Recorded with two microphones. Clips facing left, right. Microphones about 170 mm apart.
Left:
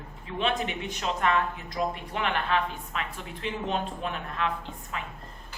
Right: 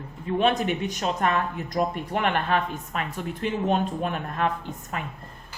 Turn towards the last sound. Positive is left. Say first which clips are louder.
# right 3 dB
turn(degrees=-50)  # may be behind; listen again after turning